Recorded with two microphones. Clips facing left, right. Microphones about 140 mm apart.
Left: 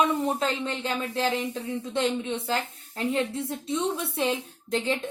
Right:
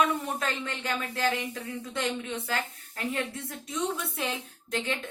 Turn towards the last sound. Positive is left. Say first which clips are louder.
# left 5 dB
turn(degrees=25)  # may be behind; listen again after turning